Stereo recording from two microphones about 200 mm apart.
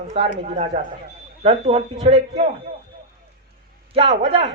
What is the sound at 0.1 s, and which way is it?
A man's voice, 35° right (ahead or behind).